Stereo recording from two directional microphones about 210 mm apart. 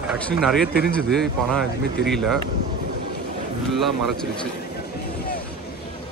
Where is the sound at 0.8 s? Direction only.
Centre (ahead or behind).